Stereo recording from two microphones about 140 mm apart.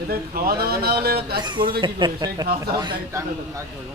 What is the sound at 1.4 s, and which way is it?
Speech, 35° right (ahead or behind).